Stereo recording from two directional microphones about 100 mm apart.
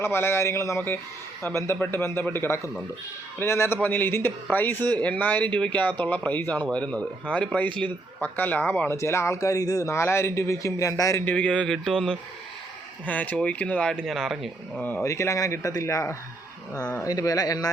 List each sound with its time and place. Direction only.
0.0 s speech: 25° left (ahead or behind)
11.3 s speech: 10° left (ahead or behind)
13.1 s speech: 15° left (ahead or behind); by 14.5 s centre (ahead or behind)
14.8 s speech: 20° left (ahead or behind)
15.0 s speech: 30° left (ahead or behind)